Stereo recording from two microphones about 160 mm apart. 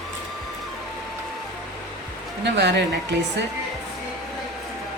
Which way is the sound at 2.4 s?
90° right.